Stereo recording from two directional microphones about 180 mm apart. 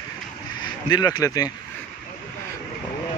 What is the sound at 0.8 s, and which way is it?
Speech, 25° left (ahead or behind).